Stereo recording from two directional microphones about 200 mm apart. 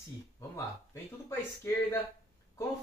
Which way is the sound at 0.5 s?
15° left (ahead or behind).